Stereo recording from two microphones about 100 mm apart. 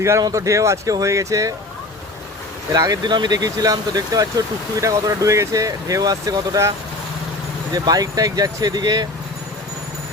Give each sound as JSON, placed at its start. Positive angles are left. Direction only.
{"t": 0.2, "sound": "speech", "side_deg": -35}
{"t": 2.7, "sound": "speech", "side_deg": -40}